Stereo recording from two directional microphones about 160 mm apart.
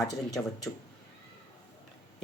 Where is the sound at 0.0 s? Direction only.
20° left (ahead or behind).